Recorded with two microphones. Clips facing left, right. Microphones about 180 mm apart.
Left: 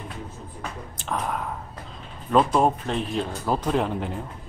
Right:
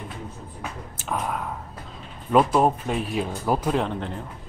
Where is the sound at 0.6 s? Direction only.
5° right (ahead or behind).